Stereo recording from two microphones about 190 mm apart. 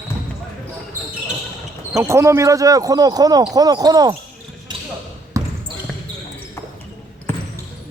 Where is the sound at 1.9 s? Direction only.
15° right (ahead or behind).